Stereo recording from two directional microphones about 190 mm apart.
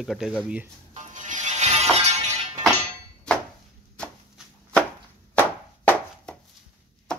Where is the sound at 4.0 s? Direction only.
5° left (ahead or behind).